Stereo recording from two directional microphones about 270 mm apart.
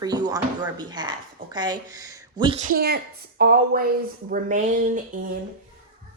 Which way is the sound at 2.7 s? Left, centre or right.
Right.